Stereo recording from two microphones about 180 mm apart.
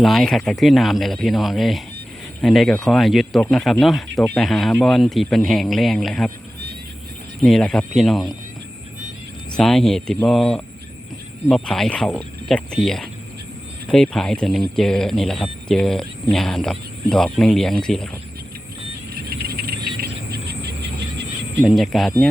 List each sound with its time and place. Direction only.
0.0 s speech: centre (ahead or behind)
7.4 s speech: 5° left (ahead or behind)
9.6 s speech: centre (ahead or behind)
19.1 s a sound: 55° right (ahead or behind)
21.6 s speech: centre (ahead or behind)